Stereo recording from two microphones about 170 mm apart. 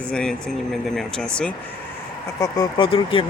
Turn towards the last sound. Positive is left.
turn(degrees=30)  # may be behind; listen again after turning